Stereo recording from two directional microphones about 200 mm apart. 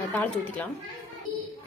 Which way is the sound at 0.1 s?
10° left (ahead or behind).